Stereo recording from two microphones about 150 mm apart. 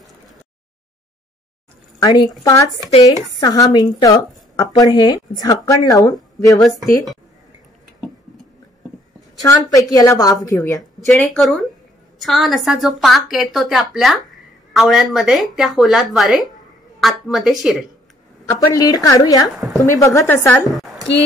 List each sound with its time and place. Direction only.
2.0 s speech: 30° left (ahead or behind)
3.3 s a woman's voice: 25° left (ahead or behind)
9.4 s a woman's voice: 25° left (ahead or behind)
11.1 s a woman's voice: centre (ahead or behind)
18.5 s a woman's voice: 25° left (ahead or behind)
19.5 s a woman's voice: centre (ahead or behind)
19.9 s a woman's voice: 20° left (ahead or behind)
20.8 s a sound: centre (ahead or behind)